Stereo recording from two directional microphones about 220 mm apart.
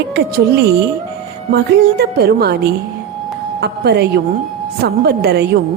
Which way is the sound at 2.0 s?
45° right (ahead or behind).